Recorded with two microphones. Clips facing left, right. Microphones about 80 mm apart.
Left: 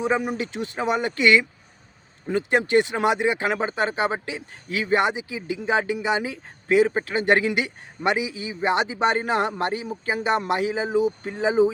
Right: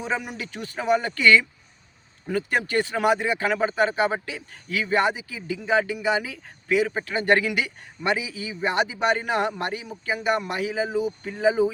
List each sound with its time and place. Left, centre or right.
0.2 s speech: left